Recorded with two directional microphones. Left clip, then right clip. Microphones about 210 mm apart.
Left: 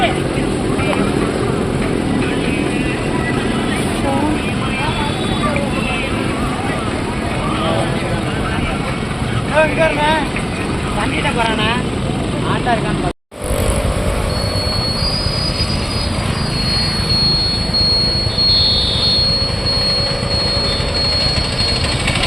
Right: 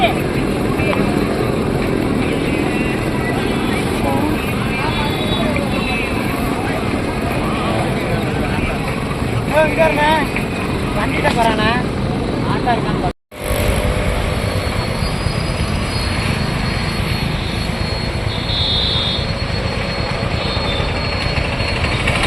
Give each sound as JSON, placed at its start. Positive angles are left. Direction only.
{"t": 9.6, "sound": "vehicle", "side_deg": -35}